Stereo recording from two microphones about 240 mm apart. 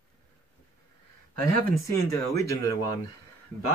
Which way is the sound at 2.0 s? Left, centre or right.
Centre.